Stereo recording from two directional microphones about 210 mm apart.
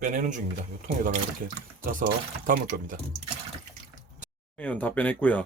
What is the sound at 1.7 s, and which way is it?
Speech, 40° right (ahead or behind).